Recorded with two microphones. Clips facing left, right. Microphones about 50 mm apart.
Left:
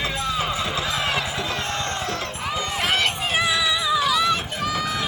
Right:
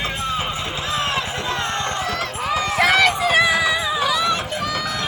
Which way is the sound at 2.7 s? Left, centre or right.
Right.